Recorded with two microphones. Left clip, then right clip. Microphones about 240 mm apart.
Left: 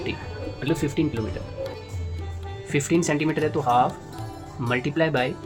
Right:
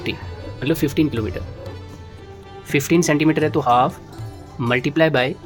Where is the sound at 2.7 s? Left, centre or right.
Right.